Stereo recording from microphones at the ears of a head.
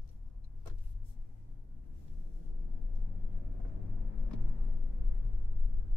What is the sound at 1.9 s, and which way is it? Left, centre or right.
Vehicle, left.